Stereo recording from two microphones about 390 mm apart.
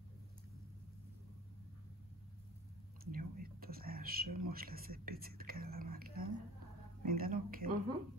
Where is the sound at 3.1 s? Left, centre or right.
Right.